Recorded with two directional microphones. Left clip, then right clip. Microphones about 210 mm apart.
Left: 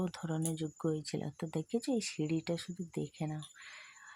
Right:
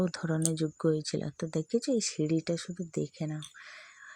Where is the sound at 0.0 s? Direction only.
20° right (ahead or behind).